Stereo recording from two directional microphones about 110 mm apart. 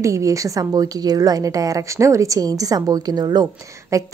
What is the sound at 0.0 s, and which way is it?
Speech, 30° right (ahead or behind).